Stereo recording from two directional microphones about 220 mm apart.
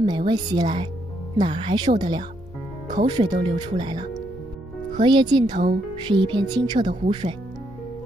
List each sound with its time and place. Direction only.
0.0 s speech: 20° right (ahead or behind)
5.0 s speech: 20° right (ahead or behind)
5.5 s speech: 45° right (ahead or behind)
6.0 s speech: 20° right (ahead or behind)